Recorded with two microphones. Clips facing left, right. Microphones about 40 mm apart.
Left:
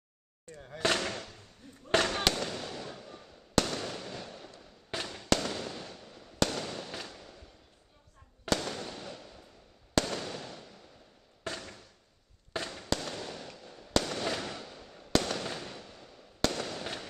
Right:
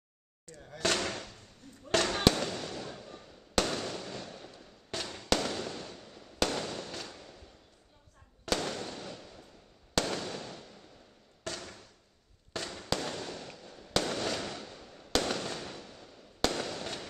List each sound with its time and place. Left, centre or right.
0.6 s speech: centre
0.9 s speech: centre
2.0 s fireworks: centre
11.6 s a sound: centre
12.6 s fireworks: centre
16.8 s fireworks: centre